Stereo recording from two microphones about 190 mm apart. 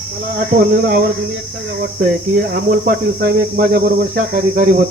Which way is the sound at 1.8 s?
55° right (ahead or behind).